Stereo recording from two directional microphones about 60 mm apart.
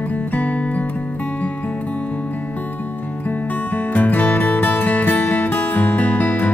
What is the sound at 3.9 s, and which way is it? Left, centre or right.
Music, left.